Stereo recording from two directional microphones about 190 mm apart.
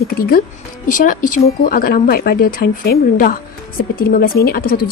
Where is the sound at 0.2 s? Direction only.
50° left (ahead or behind).